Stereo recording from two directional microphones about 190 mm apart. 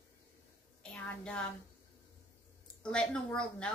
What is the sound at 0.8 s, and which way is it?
Speech, 5° left (ahead or behind).